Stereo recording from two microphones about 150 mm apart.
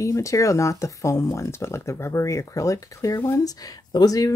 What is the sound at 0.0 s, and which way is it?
Speech, 20° left (ahead or behind).